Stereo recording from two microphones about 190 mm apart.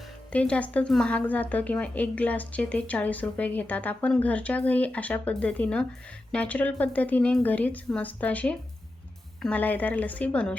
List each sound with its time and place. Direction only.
0.3 s a woman's voice: 5° left (ahead or behind)